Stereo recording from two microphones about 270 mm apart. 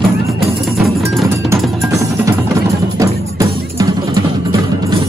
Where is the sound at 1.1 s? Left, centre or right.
Centre.